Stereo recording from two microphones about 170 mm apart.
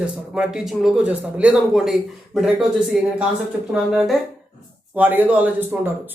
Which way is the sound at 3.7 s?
5° right (ahead or behind).